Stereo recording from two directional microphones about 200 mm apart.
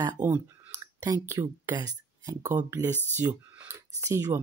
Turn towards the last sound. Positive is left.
turn(degrees=-15)  # may be behind; listen again after turning